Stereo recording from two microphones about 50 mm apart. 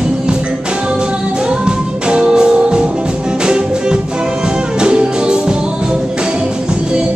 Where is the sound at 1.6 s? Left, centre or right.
Centre.